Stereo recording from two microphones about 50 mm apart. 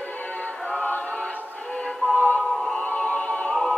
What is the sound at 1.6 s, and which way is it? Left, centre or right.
Music, centre.